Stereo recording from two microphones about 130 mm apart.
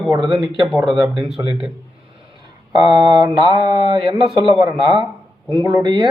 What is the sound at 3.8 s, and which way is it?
Speech, 40° right (ahead or behind).